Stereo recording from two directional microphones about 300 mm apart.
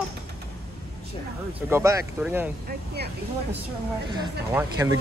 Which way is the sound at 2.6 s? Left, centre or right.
Right.